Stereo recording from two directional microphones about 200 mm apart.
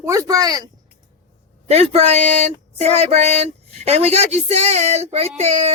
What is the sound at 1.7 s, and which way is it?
Speech, 30° right (ahead or behind).